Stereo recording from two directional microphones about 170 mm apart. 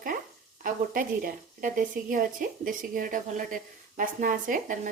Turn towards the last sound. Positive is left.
turn(degrees=-50)  # may be behind; listen again after turning